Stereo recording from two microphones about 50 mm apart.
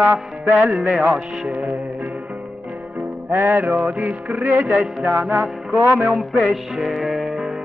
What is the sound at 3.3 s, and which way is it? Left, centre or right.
Music, right.